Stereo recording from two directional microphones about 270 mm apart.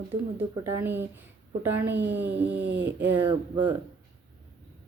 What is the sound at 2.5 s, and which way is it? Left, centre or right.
Speech, right.